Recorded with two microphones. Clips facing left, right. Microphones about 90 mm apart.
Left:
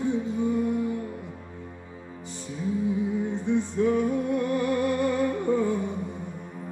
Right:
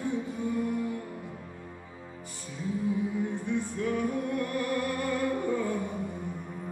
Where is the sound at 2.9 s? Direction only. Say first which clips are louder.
Left 3 dB; 20° left (ahead or behind).